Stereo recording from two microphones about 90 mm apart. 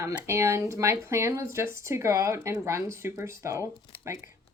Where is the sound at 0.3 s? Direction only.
30° right (ahead or behind).